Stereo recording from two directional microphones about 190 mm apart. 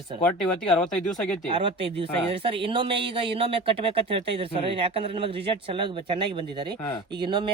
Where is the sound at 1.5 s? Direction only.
25° right (ahead or behind).